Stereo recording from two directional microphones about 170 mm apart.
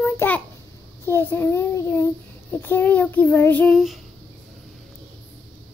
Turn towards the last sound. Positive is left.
turn(degrees=0)  # may be behind; listen again after turning